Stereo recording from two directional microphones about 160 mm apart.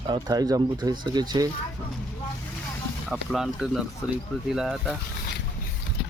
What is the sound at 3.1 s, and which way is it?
Speech, 5° right (ahead or behind).